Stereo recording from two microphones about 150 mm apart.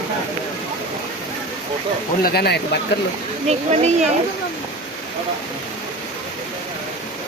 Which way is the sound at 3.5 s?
45° right (ahead or behind).